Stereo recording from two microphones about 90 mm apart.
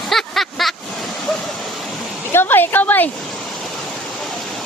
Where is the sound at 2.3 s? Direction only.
25° left (ahead or behind).